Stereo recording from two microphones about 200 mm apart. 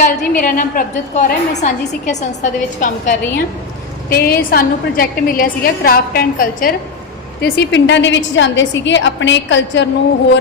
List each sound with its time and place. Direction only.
0.0 s a woman's voice: 45° left (ahead or behind)
7.4 s a woman's voice: 60° left (ahead or behind)